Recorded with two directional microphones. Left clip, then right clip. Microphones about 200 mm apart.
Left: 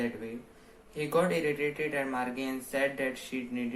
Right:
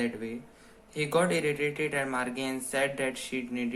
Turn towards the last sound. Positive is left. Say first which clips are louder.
# right 3 dB
turn(degrees=-30)  # may be behind; listen again after turning